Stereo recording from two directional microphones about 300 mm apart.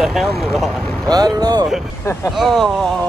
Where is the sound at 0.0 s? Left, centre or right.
Centre.